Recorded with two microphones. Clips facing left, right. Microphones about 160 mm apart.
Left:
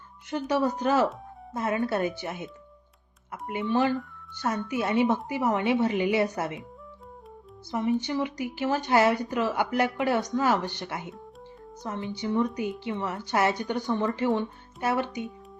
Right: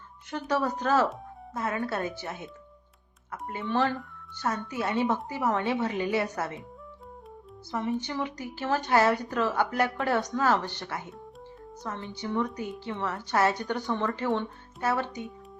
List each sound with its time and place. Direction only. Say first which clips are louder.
0.3 s speech: left 3 dB; 15° left (ahead or behind)
7.7 s speech: left 4 dB; 15° left (ahead or behind)